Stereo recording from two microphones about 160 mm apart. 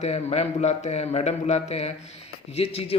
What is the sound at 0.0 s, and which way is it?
Speech, 40° left (ahead or behind).